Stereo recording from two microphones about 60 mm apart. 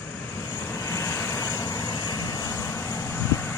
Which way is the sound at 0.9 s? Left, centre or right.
Left.